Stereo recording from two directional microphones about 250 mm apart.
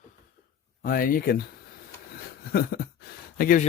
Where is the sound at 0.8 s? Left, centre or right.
Left.